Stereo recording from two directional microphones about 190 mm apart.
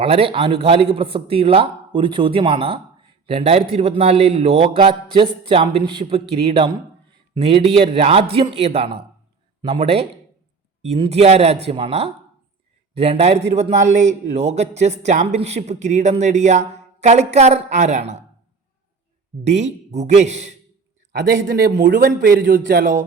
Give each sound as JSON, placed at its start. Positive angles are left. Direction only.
{"t": 0.0, "sound": "a man's voice", "side_deg": -30}
{"t": 19.5, "sound": "a man's voice", "side_deg": -35}
{"t": 21.1, "sound": "a man's voice", "side_deg": -55}